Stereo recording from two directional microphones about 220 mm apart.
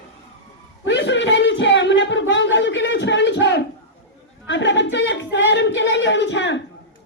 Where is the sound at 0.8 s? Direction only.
55° left (ahead or behind).